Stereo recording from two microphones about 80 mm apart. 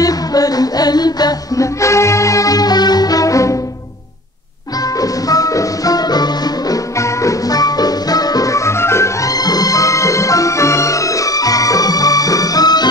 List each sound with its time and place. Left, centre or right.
0.0 s music: left
1.8 s music: left
5.0 s music: left
7.0 s music: left